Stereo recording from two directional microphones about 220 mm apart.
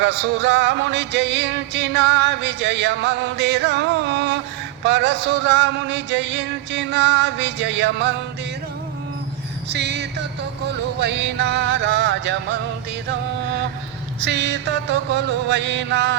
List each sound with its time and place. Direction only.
0.0 s music: 55° right (ahead or behind)
9.6 s music: 50° right (ahead or behind)
14.2 s music: 50° right (ahead or behind)